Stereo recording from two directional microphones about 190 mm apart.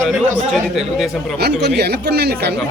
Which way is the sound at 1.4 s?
60° right (ahead or behind).